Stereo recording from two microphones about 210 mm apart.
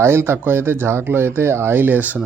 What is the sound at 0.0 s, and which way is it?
Speech, 10° right (ahead or behind).